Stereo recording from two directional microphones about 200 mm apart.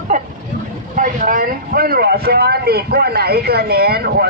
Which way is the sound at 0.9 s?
40° right (ahead or behind).